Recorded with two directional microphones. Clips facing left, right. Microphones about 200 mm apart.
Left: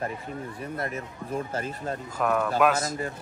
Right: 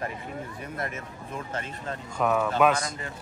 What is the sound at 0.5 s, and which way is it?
Speech, 30° left (ahead or behind).